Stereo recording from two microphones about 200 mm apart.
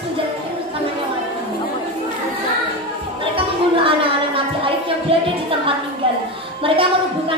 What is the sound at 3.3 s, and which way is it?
Music, 25° right (ahead or behind).